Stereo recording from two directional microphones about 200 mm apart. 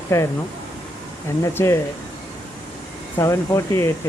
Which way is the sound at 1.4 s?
15° left (ahead or behind).